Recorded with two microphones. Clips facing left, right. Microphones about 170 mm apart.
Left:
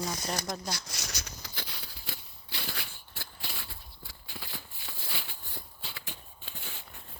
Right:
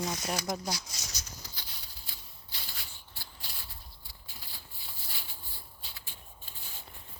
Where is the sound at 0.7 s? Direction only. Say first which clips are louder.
Left 1 dB; 65° left (ahead or behind).